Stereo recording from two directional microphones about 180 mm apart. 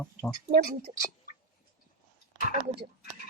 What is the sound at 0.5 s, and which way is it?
Speech, 60° right (ahead or behind).